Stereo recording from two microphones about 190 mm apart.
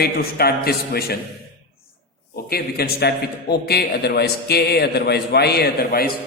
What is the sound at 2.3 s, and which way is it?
A man's voice, 55° left (ahead or behind).